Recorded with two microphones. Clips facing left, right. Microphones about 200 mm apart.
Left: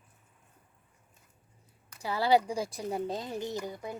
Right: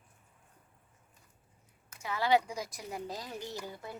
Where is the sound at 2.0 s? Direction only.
35° left (ahead or behind).